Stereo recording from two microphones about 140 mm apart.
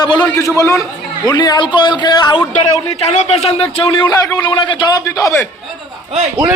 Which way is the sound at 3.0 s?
50° left (ahead or behind).